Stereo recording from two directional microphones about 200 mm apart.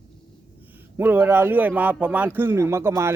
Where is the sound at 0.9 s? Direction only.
10° right (ahead or behind).